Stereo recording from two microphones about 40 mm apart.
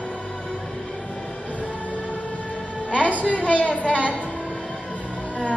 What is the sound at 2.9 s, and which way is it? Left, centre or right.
A woman's voice, left.